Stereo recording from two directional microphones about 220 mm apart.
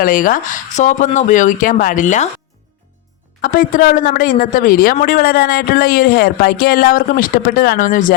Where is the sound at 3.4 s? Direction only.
40° left (ahead or behind).